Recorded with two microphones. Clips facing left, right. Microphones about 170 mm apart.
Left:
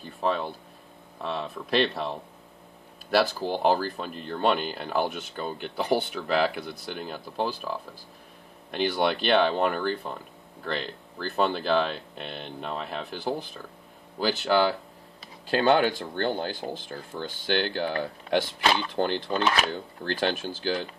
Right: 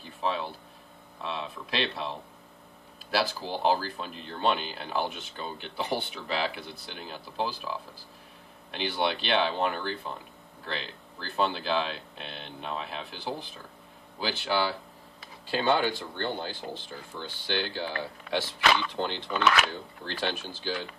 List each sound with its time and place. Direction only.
0.0 s speech: 50° left (ahead or behind)
3.1 s speech: 50° left (ahead or behind)
8.7 s speech: 45° left (ahead or behind)
18.6 s speech: 40° left (ahead or behind)